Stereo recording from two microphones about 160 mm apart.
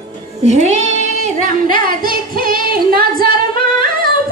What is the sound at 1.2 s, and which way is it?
Female singing, 55° right (ahead or behind).